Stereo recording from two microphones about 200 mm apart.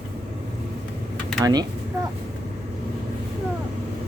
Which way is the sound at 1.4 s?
20° right (ahead or behind).